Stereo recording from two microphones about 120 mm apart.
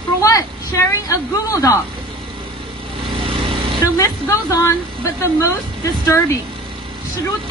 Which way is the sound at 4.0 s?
25° left (ahead or behind).